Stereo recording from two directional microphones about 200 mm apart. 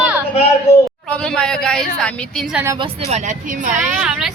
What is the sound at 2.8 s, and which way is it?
Speech, 35° right (ahead or behind).